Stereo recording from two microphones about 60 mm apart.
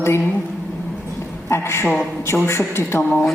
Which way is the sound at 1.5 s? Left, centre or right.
Left.